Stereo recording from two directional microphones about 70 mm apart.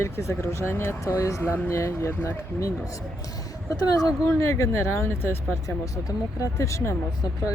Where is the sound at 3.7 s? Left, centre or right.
Left.